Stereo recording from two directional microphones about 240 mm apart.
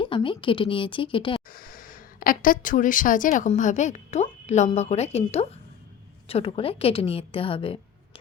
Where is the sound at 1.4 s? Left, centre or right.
Left.